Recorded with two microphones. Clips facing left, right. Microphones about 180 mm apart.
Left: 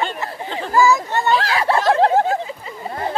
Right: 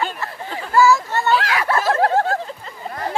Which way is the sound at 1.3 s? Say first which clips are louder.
Left 2 dB; 30° left (ahead or behind).